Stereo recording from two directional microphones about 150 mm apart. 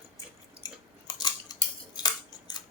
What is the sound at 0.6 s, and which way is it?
Scissors, 25° left (ahead or behind).